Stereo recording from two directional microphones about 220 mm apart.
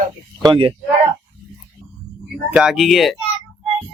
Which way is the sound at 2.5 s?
Centre (ahead or behind).